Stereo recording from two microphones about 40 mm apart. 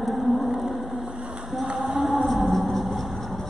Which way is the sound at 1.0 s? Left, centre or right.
Right.